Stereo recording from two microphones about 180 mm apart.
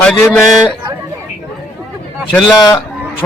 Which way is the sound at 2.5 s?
20° left (ahead or behind).